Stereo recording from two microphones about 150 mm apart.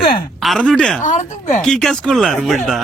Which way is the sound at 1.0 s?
55° left (ahead or behind).